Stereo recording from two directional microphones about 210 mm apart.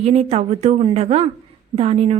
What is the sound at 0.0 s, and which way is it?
A woman's voice, 30° right (ahead or behind).